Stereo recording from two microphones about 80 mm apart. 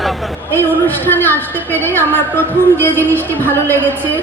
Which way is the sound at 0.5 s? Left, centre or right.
Left.